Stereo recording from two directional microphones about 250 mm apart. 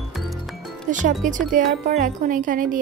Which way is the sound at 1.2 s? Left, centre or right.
Right.